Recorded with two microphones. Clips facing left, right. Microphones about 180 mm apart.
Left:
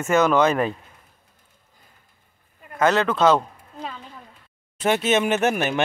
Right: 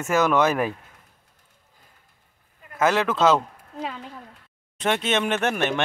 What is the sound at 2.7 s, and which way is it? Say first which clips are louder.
Speech: left 2 dB; 5° right (ahead or behind).